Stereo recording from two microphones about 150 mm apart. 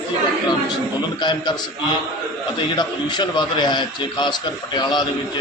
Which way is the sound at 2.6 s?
30° left (ahead or behind).